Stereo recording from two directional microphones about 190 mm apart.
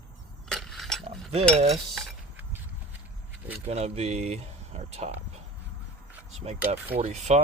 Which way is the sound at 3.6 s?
35° right (ahead or behind).